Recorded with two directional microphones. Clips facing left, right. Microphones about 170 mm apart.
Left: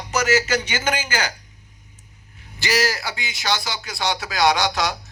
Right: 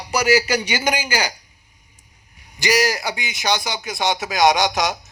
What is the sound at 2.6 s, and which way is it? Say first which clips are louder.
A man's voice: right 3 dB; 15° right (ahead or behind).